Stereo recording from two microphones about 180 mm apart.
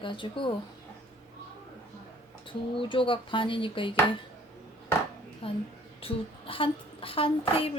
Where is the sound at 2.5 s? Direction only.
30° left (ahead or behind).